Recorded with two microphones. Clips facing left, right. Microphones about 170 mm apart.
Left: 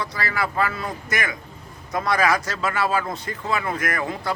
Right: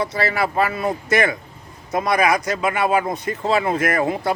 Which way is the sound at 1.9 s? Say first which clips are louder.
Right 3 dB; 20° right (ahead or behind).